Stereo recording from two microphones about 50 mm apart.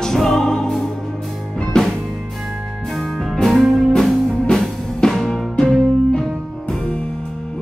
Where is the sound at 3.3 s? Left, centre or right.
Centre.